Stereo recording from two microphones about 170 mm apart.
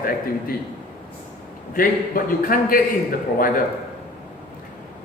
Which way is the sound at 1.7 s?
55° left (ahead or behind).